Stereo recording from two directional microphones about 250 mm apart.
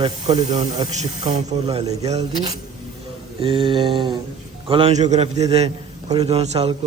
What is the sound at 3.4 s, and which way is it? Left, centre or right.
A man's voice, right.